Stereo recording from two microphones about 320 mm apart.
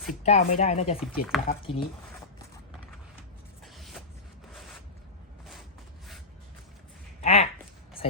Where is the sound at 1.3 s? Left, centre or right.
Centre.